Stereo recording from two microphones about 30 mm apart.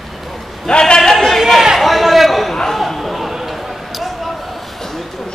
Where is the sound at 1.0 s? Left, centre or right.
Centre.